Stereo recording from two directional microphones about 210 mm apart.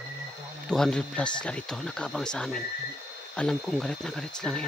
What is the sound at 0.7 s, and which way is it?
Speech, 5° left (ahead or behind).